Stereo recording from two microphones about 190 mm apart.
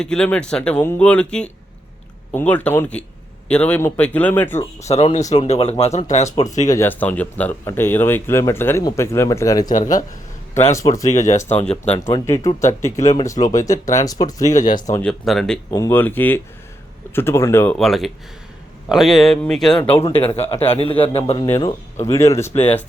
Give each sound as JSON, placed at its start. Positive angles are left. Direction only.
{"t": 0.0, "sound": "speech", "side_deg": 5}
{"t": 4.8, "sound": "a man's voice", "side_deg": 35}
{"t": 6.3, "sound": "speech", "side_deg": 20}
{"t": 9.6, "sound": "speech", "side_deg": 40}
{"t": 10.5, "sound": "speech", "side_deg": 15}
{"t": 11.1, "sound": "a man's voice", "side_deg": 40}
{"t": 11.9, "sound": "speech", "side_deg": 15}
{"t": 15.0, "sound": "speech", "side_deg": 0}
{"t": 15.7, "sound": "speech", "side_deg": 15}
{"t": 17.7, "sound": "speech", "side_deg": 0}
{"t": 20.1, "sound": "a man's voice", "side_deg": 30}
{"t": 21.4, "sound": "speech", "side_deg": 15}